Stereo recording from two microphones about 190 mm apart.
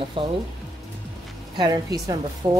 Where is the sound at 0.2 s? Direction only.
30° right (ahead or behind).